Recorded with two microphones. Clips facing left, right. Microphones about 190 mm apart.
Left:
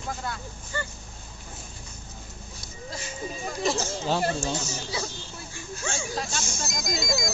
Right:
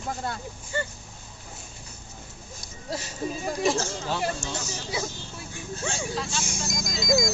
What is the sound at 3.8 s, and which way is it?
Speech, 25° left (ahead or behind).